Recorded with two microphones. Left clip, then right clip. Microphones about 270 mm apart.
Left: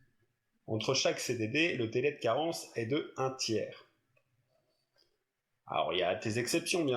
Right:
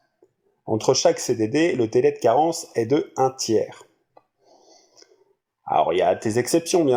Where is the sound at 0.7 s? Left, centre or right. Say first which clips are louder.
Right 13 dB; right.